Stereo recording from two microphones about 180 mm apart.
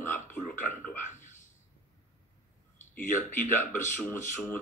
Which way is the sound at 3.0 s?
45° left (ahead or behind).